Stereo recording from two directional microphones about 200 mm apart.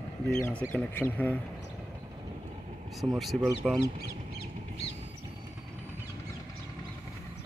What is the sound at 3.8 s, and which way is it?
Speech, 55° left (ahead or behind).